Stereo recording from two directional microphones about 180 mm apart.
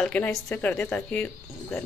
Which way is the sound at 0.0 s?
5° left (ahead or behind).